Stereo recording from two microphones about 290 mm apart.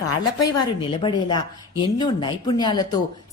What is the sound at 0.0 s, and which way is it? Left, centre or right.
Speech, left.